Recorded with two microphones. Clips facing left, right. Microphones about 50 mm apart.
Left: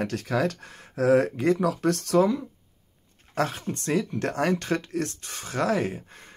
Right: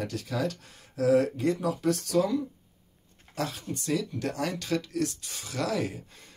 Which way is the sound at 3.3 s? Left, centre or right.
Left.